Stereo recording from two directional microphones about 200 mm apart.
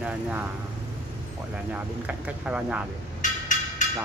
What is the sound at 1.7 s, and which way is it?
Speech, 5° right (ahead or behind).